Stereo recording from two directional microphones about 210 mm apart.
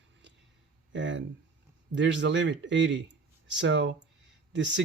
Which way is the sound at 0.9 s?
60° right (ahead or behind).